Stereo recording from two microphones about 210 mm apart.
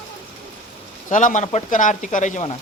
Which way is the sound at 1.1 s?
35° left (ahead or behind).